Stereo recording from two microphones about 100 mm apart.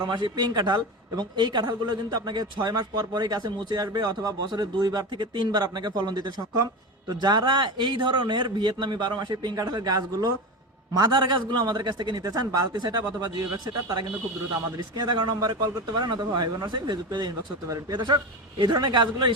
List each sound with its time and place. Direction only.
0.1 s speech: 50° right (ahead or behind)
14.8 s speech: 45° right (ahead or behind)